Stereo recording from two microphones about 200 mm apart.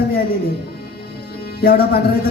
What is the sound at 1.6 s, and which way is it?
Speech, 50° left (ahead or behind).